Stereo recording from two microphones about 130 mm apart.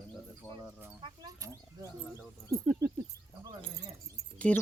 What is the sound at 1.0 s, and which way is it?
Speech, 40° right (ahead or behind).